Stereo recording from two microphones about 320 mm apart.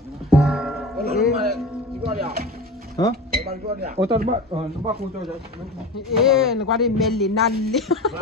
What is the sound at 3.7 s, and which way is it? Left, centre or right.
Speech, right.